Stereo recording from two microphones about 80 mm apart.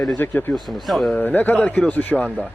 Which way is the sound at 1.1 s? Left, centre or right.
Left.